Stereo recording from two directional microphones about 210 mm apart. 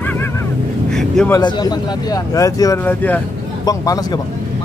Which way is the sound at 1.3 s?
20° left (ahead or behind).